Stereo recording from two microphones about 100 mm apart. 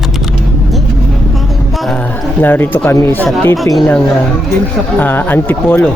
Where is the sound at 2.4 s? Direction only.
20° left (ahead or behind).